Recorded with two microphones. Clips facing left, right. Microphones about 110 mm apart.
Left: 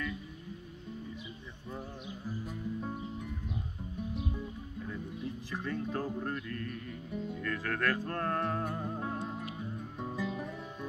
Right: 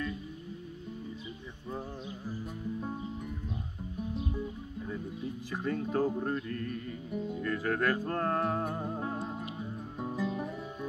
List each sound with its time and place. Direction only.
5.5 s music: 10° right (ahead or behind)
5.9 s speech: 10° right (ahead or behind)
7.1 s music: 10° right (ahead or behind)